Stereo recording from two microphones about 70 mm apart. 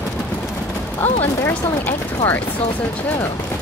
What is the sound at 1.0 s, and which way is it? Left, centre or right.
Speech, left.